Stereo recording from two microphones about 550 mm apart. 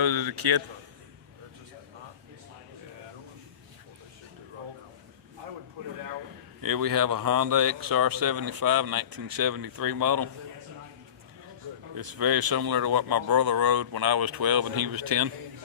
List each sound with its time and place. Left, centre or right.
0.0 s a man's voice: right
6.6 s speech: right
11.9 s speech: right